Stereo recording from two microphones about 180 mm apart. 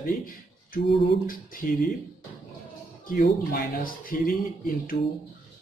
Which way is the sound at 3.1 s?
50° left (ahead or behind).